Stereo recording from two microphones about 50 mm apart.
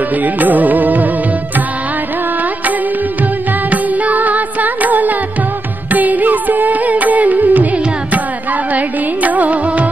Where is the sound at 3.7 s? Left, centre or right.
Right.